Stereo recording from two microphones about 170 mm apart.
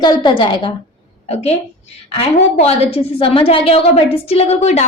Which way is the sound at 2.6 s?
35° left (ahead or behind).